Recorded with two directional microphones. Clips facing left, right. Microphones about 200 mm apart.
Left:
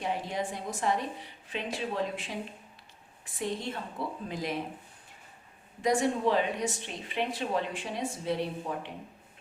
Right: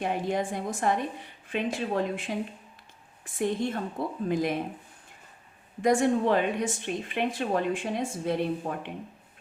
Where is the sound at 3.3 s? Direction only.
50° right (ahead or behind).